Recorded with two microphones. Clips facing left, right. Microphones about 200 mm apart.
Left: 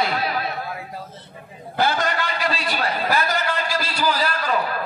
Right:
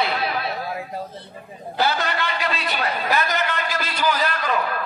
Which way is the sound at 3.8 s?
10° left (ahead or behind).